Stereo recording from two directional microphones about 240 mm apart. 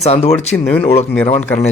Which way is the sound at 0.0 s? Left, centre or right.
Left.